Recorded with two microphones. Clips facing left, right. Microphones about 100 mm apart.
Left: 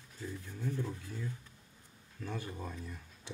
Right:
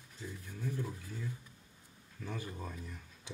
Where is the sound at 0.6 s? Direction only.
10° right (ahead or behind).